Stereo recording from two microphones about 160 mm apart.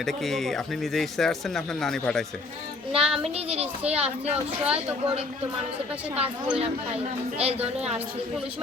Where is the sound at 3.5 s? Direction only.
40° right (ahead or behind).